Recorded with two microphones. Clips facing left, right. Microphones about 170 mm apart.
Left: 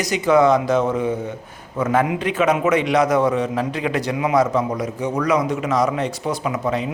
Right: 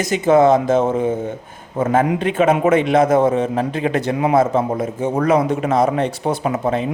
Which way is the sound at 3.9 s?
45° right (ahead or behind).